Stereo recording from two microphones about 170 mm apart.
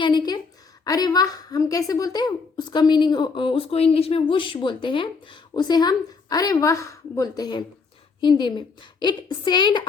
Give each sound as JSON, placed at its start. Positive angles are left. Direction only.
{"t": 0.0, "sound": "a woman's voice", "side_deg": 25}